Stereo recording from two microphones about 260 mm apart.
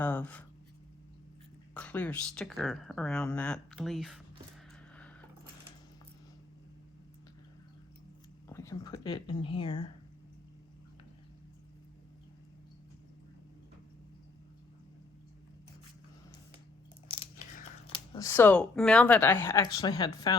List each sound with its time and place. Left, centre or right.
0.0 s speech: centre
1.7 s speech: centre
8.4 s speech: centre
17.1 s speech: left